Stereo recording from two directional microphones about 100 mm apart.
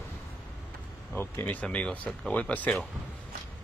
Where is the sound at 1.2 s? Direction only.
20° left (ahead or behind).